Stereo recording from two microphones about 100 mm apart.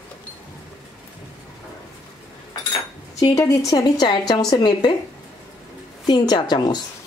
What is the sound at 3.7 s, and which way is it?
Speech, 45° left (ahead or behind).